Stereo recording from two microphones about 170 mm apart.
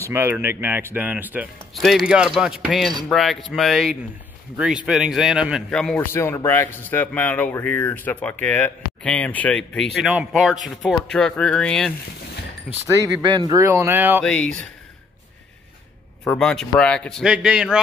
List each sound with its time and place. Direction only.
0.0 s a man's voice: 15° right (ahead or behind); by 6.0 s 5° left (ahead or behind)
6.1 s a man's voice: 15° left (ahead or behind); by 12.8 s 5° right (ahead or behind)
13.2 s speech: 25° right (ahead or behind)
14.2 s a man's voice: 5° left (ahead or behind)
16.3 s a man's voice: 5° left (ahead or behind)